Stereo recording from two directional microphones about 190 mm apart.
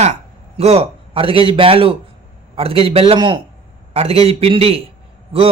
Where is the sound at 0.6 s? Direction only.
30° right (ahead or behind).